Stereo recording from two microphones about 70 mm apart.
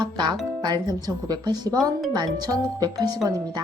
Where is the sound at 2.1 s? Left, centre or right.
Right.